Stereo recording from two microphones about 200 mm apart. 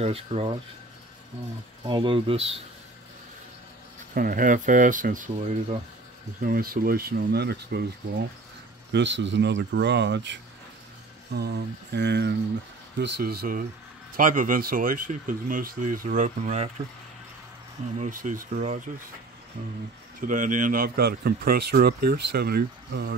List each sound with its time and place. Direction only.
0.0 s speech: 30° right (ahead or behind)
1.9 s speech: 25° right (ahead or behind)
4.1 s speech: 45° right (ahead or behind)
8.9 s speech: 65° right (ahead or behind); by 16.7 s 35° right (ahead or behind)
17.9 s speech: 40° right (ahead or behind)
20.2 s speech: 40° right (ahead or behind)